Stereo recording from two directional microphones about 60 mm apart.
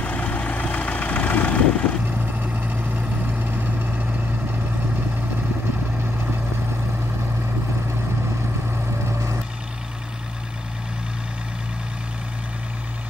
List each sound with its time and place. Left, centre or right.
0.0 s vehicle: left
2.0 s vehicle: right
9.0 s vehicle: right